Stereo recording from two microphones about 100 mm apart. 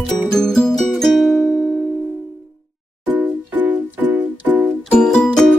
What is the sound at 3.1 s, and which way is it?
Music, 20° right (ahead or behind).